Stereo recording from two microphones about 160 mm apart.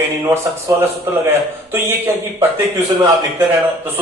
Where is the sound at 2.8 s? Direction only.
20° right (ahead or behind).